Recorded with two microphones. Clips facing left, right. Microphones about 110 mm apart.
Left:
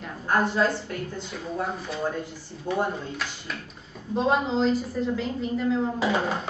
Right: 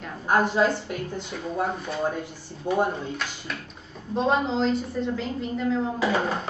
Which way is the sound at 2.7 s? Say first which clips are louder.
Right 3 dB; 20° right (ahead or behind).